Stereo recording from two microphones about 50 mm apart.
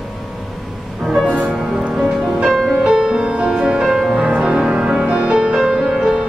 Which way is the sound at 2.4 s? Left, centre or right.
Centre.